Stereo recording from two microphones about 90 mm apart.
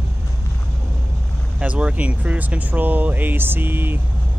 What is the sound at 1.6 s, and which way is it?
Speech, 15° right (ahead or behind).